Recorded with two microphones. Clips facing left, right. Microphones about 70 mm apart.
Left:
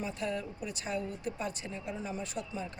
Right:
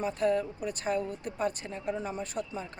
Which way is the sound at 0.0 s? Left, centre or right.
Right.